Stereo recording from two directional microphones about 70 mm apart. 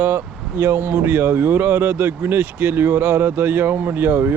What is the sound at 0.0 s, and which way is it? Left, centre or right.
Speech, right.